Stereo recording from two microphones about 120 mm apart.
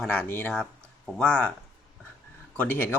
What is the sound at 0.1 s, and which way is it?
Speech, 15° left (ahead or behind).